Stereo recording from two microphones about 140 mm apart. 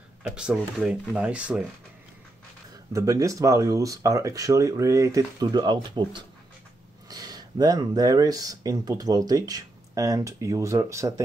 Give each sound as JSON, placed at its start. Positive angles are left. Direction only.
{"t": 0.4, "sound": "speech", "side_deg": -5}
{"t": 2.9, "sound": "speech", "side_deg": -25}